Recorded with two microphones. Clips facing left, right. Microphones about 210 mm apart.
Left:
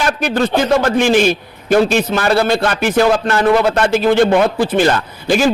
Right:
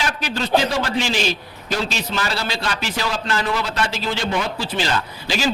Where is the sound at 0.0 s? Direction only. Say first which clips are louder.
Left 9 dB; 50° left (ahead or behind).